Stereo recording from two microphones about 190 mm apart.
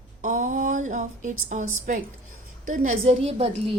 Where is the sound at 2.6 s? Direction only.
40° right (ahead or behind).